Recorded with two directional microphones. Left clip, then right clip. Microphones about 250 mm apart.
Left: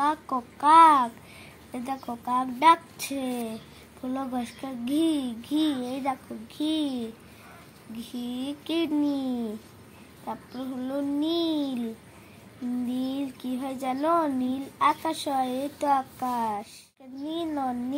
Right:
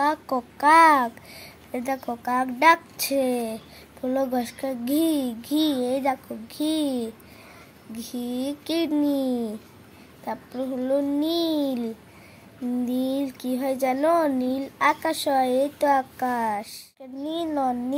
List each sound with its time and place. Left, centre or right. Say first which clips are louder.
0.0 s a child's voice: right 3 dB; right
8.3 s speech: right 4 dB; right
10.8 s speech: right 5 dB; right
12.9 s a child's voice: right 5 dB; right